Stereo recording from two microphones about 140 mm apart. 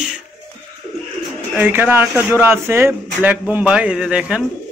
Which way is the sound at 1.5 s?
15° right (ahead or behind).